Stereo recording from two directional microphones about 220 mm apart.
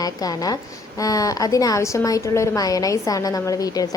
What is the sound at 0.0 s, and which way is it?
A woman's voice, 15° left (ahead or behind).